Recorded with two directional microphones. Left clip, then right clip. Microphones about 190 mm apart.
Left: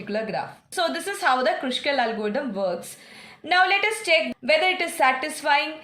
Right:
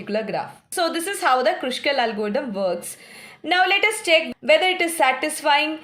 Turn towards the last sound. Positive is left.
turn(degrees=-35)  # may be behind; listen again after turning